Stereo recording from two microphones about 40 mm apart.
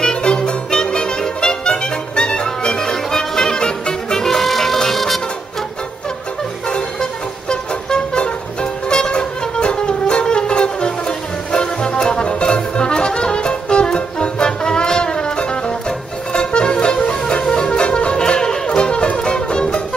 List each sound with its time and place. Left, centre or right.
0.0 s music: left; by 5.2 s centre
6.7 s music: centre